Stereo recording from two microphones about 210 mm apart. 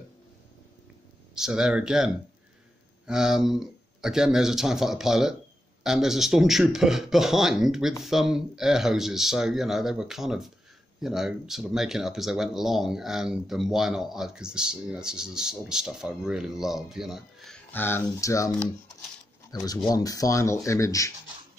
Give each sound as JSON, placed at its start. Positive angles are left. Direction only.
{"t": 1.3, "sound": "speech", "side_deg": -5}
{"t": 19.5, "sound": "speech", "side_deg": 15}